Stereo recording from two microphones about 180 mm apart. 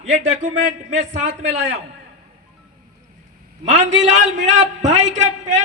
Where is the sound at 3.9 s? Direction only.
40° right (ahead or behind).